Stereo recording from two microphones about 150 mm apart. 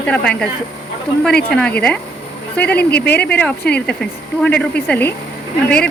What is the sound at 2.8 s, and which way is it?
Speech, 90° left.